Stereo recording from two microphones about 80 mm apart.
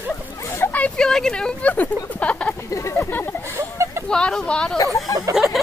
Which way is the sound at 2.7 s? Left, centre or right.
Left.